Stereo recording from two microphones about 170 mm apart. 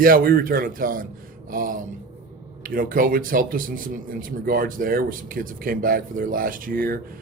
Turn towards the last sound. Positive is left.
turn(degrees=-60)  # may be behind; listen again after turning